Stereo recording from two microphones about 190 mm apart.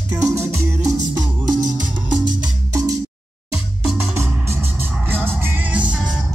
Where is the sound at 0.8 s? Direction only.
20° right (ahead or behind).